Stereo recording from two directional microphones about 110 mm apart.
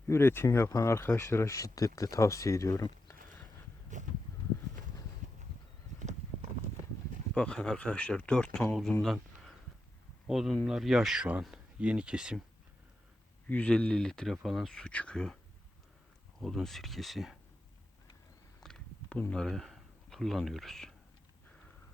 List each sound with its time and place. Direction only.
0.1 s speech: 20° left (ahead or behind)
4.0 s a sound: 90° right
7.3 s speech: 5° left (ahead or behind)
9.0 s a sound: centre (ahead or behind)
10.2 s speech: centre (ahead or behind)
13.5 s speech: 10° left (ahead or behind)
16.4 s speech: centre (ahead or behind)
18.6 s a sound: 5° left (ahead or behind)
19.3 s speech: 5° left (ahead or behind)